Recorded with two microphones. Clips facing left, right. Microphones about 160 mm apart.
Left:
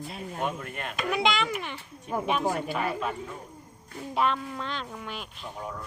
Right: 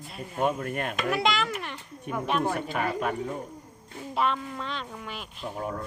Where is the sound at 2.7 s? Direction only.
50° right (ahead or behind).